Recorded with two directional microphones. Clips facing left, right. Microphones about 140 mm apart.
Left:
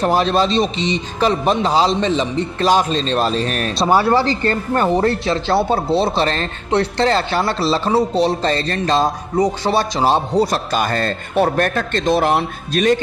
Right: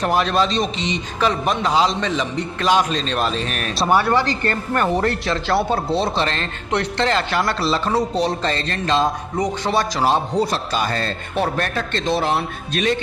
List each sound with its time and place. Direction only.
0.0 s a man's voice: 30° left (ahead or behind); by 12.9 s 45° left (ahead or behind)